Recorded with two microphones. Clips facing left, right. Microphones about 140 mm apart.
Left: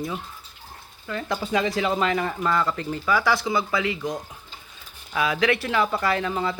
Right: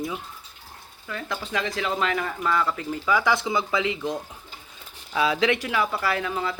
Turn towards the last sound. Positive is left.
turn(degrees=0)  # may be behind; listen again after turning